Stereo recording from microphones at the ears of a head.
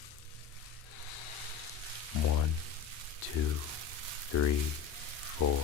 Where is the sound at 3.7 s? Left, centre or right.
Right.